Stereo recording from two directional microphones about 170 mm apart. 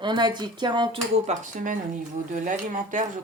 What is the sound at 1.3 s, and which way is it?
Speech, 50° right (ahead or behind).